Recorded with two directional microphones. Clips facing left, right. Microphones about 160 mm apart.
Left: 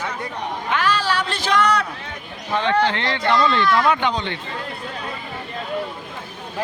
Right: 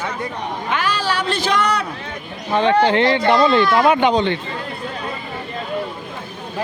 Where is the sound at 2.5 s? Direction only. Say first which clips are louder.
Right 5 dB; 15° right (ahead or behind).